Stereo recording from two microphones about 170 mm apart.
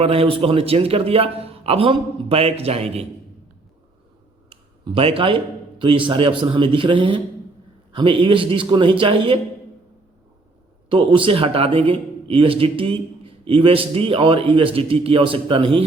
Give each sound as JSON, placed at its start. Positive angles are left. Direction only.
{"t": 0.0, "sound": "a man's voice", "side_deg": -35}
{"t": 4.9, "sound": "a man's voice", "side_deg": -35}
{"t": 10.8, "sound": "a man's voice", "side_deg": -30}